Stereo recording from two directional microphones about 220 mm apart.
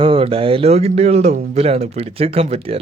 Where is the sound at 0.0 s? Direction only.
25° right (ahead or behind).